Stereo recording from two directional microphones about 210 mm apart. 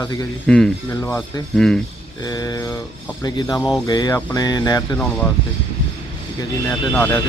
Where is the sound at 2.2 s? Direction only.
20° left (ahead or behind).